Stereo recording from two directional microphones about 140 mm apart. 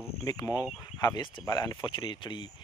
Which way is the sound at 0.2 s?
25° left (ahead or behind).